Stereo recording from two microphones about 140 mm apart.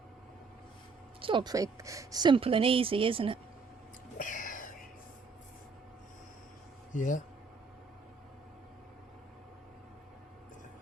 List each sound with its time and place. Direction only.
1.2 s speech: 35° right (ahead or behind)
4.2 s whispering: 70° left (ahead or behind)
6.9 s speech: 65° left (ahead or behind)